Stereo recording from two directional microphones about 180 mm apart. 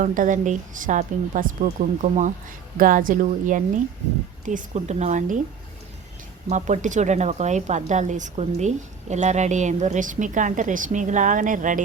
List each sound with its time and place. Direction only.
0.0 s a woman's voice: 45° right (ahead or behind)
6.5 s a woman's voice: 40° right (ahead or behind)